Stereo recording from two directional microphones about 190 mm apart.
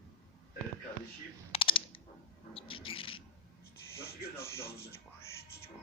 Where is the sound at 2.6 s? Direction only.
30° left (ahead or behind).